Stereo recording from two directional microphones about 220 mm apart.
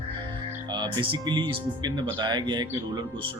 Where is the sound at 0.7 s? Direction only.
20° right (ahead or behind).